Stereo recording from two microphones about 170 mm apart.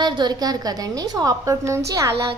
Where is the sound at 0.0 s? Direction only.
25° right (ahead or behind).